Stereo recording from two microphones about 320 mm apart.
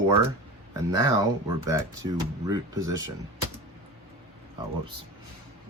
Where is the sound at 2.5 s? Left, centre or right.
Centre.